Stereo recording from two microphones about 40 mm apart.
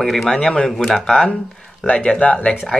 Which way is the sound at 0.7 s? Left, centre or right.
Centre.